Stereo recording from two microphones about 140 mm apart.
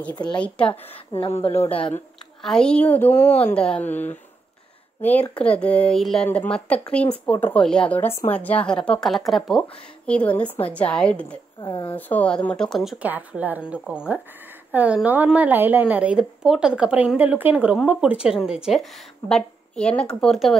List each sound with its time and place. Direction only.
0.1 s speech: 30° left (ahead or behind)
0.4 s a woman's voice: 10° left (ahead or behind)
1.1 s a woman's voice: 45° left (ahead or behind)
2.4 s a woman's voice: 5° left (ahead or behind)
11.6 s speech: 35° left (ahead or behind)
11.9 s a woman's voice: 10° left (ahead or behind)
13.0 s a woman's voice: 10° right (ahead or behind)